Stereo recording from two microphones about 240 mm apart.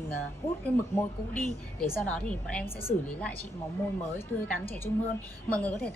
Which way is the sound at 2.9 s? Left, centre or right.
Left.